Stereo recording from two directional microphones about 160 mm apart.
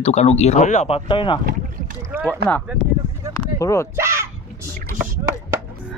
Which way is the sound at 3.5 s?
20° left (ahead or behind).